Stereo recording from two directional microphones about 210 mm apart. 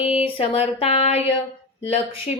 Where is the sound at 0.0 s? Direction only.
30° left (ahead or behind).